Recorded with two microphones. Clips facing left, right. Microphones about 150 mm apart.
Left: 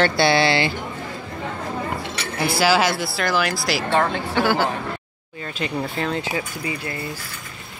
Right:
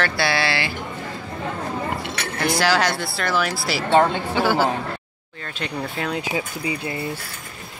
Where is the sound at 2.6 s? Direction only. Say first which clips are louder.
Left 3 dB; 5° left (ahead or behind).